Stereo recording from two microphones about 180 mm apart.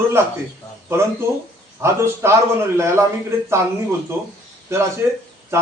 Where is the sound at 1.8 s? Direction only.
15° right (ahead or behind).